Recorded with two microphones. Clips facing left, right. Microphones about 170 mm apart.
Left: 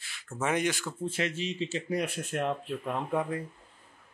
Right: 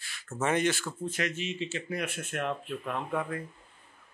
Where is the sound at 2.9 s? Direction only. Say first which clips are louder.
Left 2 dB; 15° left (ahead or behind).